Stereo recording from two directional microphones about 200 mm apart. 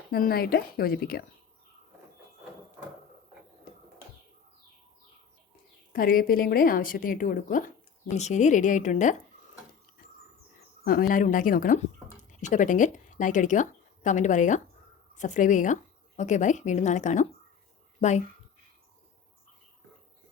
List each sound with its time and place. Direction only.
0.1 s a woman's voice: 50° left (ahead or behind)
5.9 s a woman's voice: 45° left (ahead or behind)
10.8 s a woman's voice: 45° left (ahead or behind)